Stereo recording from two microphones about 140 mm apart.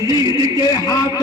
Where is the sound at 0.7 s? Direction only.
30° left (ahead or behind).